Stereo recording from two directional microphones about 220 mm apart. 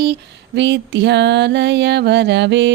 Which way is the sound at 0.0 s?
50° right (ahead or behind).